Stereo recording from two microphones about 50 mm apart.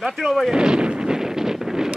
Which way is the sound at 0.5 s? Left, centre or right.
Centre.